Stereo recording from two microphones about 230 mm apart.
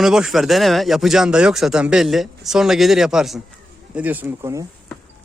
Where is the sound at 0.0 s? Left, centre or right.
Centre.